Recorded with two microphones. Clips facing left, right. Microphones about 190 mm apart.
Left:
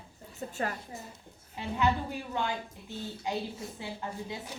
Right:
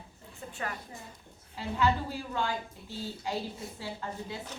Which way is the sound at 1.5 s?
20° left (ahead or behind).